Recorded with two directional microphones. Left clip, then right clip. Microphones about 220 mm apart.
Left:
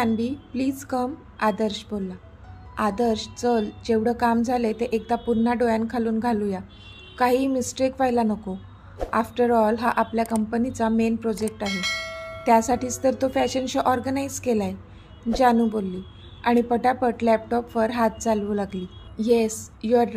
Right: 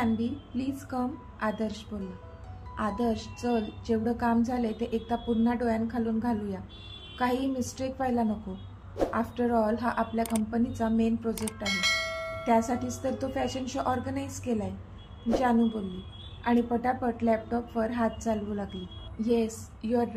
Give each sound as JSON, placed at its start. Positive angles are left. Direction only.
{"t": 0.0, "sound": "a woman's voice", "side_deg": 35}
{"t": 11.4, "sound": "bell", "side_deg": 0}
{"t": 12.4, "sound": "a woman's voice", "side_deg": 35}